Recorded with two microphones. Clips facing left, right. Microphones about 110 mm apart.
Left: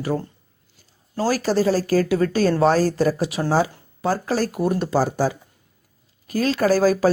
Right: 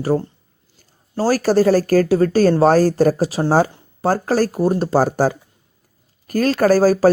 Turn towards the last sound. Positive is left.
turn(degrees=-40)  # may be behind; listen again after turning